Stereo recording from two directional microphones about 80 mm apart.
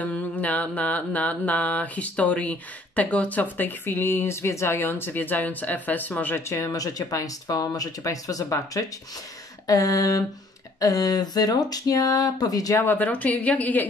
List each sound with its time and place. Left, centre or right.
0.0 s mantra: centre
6.5 s speech: left
12.8 s mantra: left